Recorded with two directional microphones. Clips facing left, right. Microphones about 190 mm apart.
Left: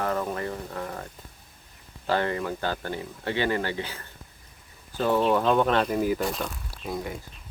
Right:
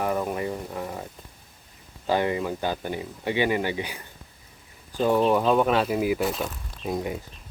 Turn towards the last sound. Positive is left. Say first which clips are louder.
# right 4 dB
turn(degrees=-20)  # may be behind; listen again after turning